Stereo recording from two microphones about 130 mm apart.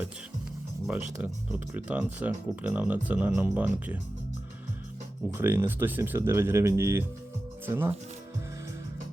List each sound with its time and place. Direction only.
0.9 s speech: 10° right (ahead or behind)
5.3 s speech: 15° right (ahead or behind)